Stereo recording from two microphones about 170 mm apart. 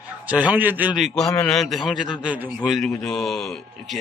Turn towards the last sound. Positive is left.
turn(degrees=0)  # may be behind; listen again after turning